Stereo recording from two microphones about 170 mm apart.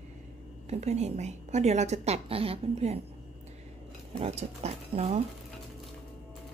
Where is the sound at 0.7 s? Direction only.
40° right (ahead or behind).